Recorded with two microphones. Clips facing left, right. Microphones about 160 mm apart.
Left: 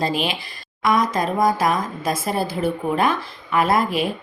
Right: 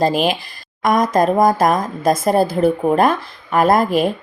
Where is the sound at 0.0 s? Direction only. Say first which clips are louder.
Right 6 dB; 45° right (ahead or behind).